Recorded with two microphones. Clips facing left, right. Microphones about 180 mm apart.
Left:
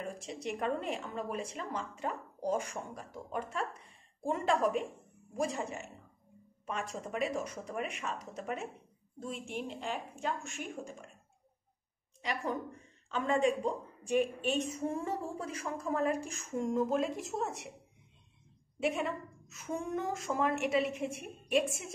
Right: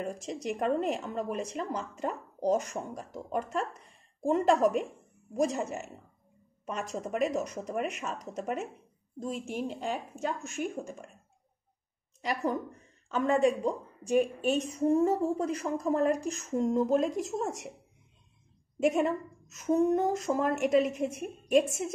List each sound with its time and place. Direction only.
0.2 s speech: centre (ahead or behind)
0.5 s a woman's voice: 45° right (ahead or behind)
7.1 s a woman's voice: 45° right (ahead or behind)
9.8 s a woman's voice: 40° right (ahead or behind)
12.2 s a woman's voice: 45° right (ahead or behind)
18.8 s a woman's voice: 45° right (ahead or behind)